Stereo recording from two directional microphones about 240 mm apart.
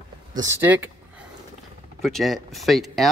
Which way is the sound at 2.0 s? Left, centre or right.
Centre.